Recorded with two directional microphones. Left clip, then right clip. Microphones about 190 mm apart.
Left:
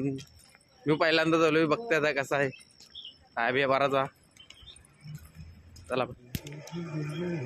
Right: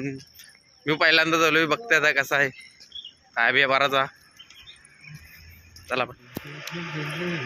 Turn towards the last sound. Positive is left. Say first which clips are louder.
# right 6 dB
turn(degrees=65)  # may be behind; listen again after turning